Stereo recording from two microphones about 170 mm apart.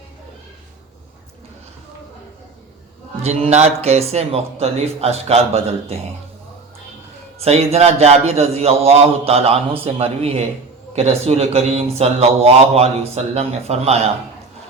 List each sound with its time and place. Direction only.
3.2 s speech: 40° right (ahead or behind)
7.3 s speech: 35° right (ahead or behind)